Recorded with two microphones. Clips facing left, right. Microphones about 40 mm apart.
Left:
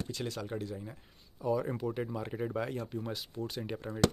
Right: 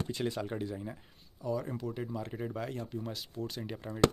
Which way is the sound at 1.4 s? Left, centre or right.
Centre.